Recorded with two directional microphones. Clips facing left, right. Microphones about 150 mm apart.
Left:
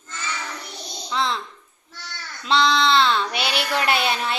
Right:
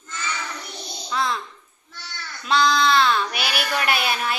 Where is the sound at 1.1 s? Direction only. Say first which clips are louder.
Even; 25° left (ahead or behind).